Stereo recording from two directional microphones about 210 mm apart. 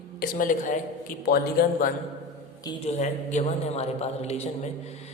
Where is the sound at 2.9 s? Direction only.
35° left (ahead or behind).